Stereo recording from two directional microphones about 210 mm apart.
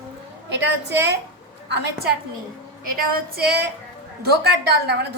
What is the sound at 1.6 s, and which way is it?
Speech, 55° right (ahead or behind).